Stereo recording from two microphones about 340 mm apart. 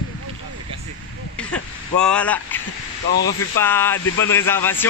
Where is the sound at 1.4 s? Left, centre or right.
Centre.